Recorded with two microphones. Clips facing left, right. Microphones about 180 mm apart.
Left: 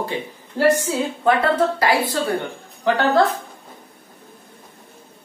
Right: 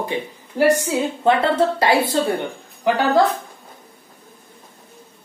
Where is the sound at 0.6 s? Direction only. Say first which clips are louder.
Right 1 dB; 10° right (ahead or behind).